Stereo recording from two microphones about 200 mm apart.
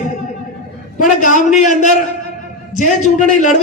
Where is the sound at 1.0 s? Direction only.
40° left (ahead or behind).